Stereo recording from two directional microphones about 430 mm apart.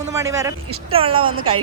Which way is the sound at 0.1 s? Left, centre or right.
Centre.